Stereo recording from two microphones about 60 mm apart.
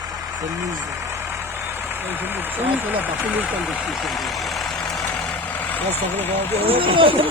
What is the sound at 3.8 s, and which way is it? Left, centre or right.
Speech, centre.